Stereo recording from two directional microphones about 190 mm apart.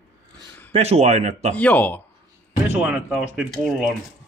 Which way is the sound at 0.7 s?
35° right (ahead or behind).